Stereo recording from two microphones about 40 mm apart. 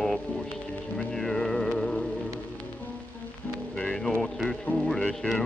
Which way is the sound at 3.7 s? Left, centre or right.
Centre.